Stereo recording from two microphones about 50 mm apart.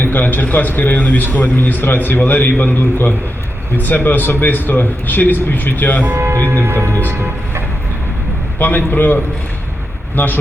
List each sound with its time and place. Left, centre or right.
0.0 s a man's voice: left
6.1 s speech: right
8.5 s a man's voice: left